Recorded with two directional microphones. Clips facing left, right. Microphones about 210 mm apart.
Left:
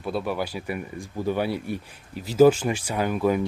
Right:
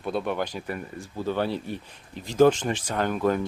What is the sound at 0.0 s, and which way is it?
Speech, 5° left (ahead or behind).